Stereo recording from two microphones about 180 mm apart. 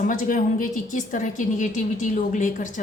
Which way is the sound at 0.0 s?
45° left (ahead or behind).